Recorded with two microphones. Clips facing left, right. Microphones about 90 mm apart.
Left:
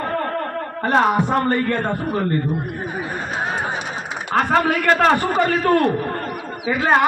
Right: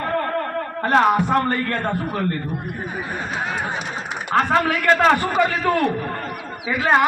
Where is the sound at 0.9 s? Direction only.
5° left (ahead or behind).